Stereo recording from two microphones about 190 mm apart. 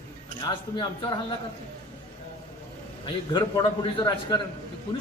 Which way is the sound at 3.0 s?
25° left (ahead or behind).